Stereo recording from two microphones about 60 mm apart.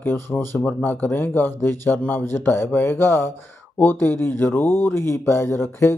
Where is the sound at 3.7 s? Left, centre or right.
Left.